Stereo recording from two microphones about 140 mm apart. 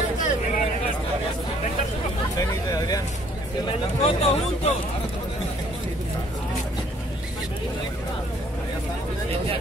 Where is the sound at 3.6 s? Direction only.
45° left (ahead or behind).